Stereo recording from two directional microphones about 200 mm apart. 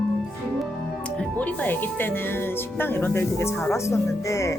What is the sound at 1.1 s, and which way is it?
Speech, 5° left (ahead or behind).